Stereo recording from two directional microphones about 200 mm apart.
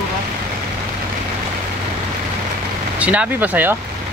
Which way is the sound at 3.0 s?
5° right (ahead or behind).